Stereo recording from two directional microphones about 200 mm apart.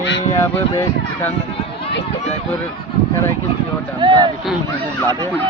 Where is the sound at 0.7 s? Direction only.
10° left (ahead or behind).